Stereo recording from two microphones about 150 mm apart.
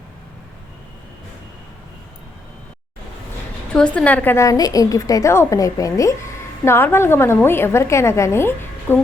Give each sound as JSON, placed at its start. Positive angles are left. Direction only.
{"t": 3.8, "sound": "a woman's voice", "side_deg": 10}